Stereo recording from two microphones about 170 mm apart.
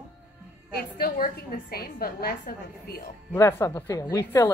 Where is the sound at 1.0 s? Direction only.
55° left (ahead or behind).